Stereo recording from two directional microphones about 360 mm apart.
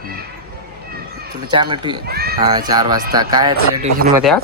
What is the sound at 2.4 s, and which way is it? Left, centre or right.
Speech, centre.